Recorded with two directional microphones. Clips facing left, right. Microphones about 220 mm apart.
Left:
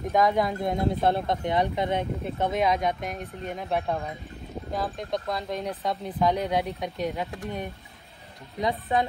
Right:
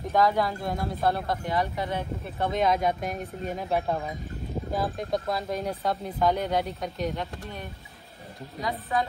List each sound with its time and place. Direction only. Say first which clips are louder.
0.1 s speech: left 1 dB; 20° left (ahead or behind)
2.5 s speech: right 2 dB; centre (ahead or behind)
8.5 s speech: left 3 dB; 20° left (ahead or behind)